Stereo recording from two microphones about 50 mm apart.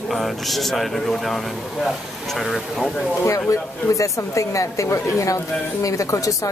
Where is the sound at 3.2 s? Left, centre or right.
Left.